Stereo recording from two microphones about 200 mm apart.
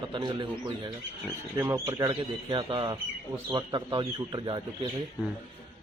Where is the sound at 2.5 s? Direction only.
25° right (ahead or behind).